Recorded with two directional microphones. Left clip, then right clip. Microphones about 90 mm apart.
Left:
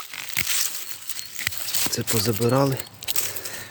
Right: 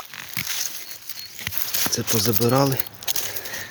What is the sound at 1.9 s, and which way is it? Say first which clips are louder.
Speech: right 3 dB; 25° right (ahead or behind).